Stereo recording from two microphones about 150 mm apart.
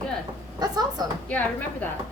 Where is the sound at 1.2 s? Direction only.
10° left (ahead or behind).